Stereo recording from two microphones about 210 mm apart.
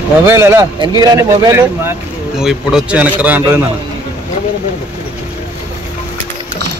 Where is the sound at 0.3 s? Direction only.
10° right (ahead or behind).